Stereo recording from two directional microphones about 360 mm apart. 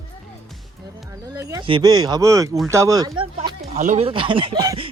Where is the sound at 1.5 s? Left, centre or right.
Centre.